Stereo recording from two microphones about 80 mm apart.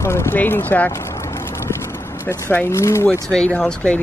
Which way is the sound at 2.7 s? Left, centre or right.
Left.